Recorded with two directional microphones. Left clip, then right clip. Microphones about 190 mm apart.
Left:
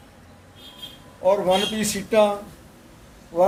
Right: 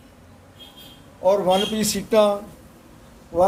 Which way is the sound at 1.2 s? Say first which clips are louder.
Right 1 dB; 25° right (ahead or behind).